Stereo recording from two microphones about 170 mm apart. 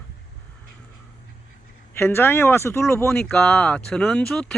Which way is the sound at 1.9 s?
15° left (ahead or behind).